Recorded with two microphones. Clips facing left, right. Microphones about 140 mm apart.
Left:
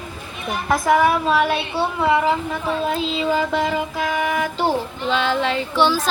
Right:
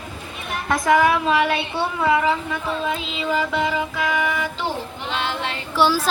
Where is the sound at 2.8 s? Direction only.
40° left (ahead or behind).